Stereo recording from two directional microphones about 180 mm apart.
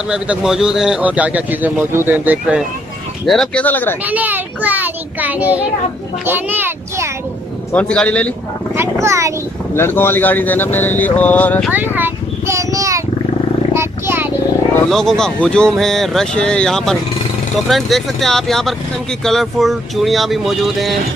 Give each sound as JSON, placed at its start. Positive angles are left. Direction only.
{"t": 0.1, "sound": "speech", "side_deg": -5}
{"t": 3.3, "sound": "speech", "side_deg": 5}
{"t": 4.0, "sound": "speech", "side_deg": -10}
{"t": 7.7, "sound": "speech", "side_deg": 5}
{"t": 9.0, "sound": "speech", "side_deg": -15}
{"t": 9.8, "sound": "speech", "side_deg": 15}
{"t": 11.7, "sound": "a sound", "side_deg": -10}
{"t": 13.7, "sound": "wild animals", "side_deg": -15}
{"t": 14.9, "sound": "speech", "side_deg": 0}